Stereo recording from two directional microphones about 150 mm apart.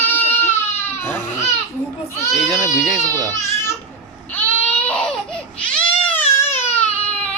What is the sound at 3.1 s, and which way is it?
Speech, 20° right (ahead or behind).